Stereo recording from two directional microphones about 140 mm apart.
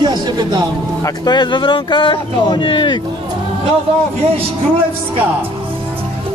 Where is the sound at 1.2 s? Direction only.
35° left (ahead or behind).